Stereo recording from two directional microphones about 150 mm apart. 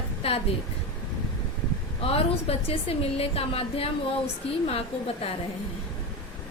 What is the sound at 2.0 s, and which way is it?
A woman's voice, 40° left (ahead or behind).